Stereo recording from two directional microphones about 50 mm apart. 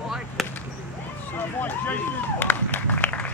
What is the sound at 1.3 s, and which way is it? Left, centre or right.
Run, left.